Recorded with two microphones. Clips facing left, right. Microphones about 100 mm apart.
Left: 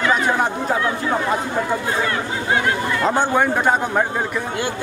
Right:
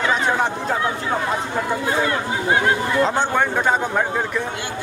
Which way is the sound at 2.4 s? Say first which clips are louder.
Right 1 dB; 25° right (ahead or behind).